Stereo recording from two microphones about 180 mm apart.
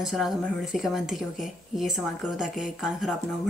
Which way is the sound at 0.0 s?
Centre (ahead or behind).